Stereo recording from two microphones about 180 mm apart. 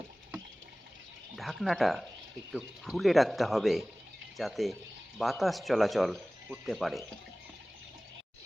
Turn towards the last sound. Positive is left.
turn(degrees=0)  # may be behind; listen again after turning